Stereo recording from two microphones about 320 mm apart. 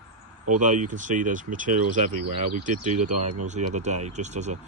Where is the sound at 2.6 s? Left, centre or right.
Right.